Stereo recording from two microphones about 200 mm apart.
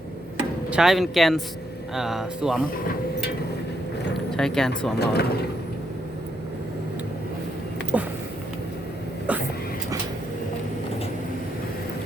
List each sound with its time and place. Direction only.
0.7 s speech: centre (ahead or behind)
4.3 s speech: 5° left (ahead or behind)
4.9 s speech: 55° left (ahead or behind)
7.9 s a sound: 5° right (ahead or behind)